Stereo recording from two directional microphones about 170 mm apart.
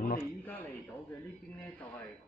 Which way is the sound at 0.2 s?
10° left (ahead or behind).